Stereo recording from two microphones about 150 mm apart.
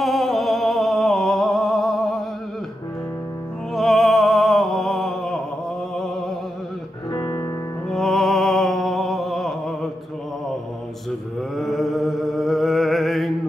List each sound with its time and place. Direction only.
0.0 s a sound: centre (ahead or behind)
3.7 s music: centre (ahead or behind)
7.1 s music: 25° left (ahead or behind)
7.9 s music: centre (ahead or behind)
11.1 s mantra: centre (ahead or behind)